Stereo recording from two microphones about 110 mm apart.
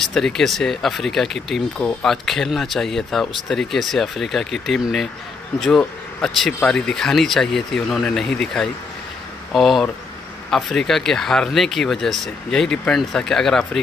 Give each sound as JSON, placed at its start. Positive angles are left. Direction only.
{"t": 0.1, "sound": "speech", "side_deg": 0}